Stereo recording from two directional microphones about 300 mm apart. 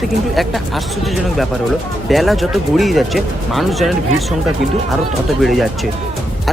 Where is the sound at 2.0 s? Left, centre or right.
Centre.